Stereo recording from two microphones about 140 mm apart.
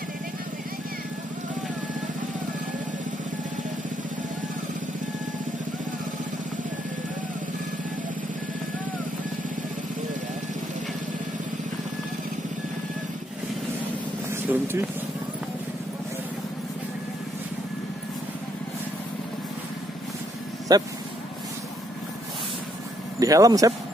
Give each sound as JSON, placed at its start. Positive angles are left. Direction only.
{"t": 14.3, "sound": "vehicle", "side_deg": -15}
{"t": 20.7, "sound": "speech", "side_deg": -30}
{"t": 23.1, "sound": "speech", "side_deg": -25}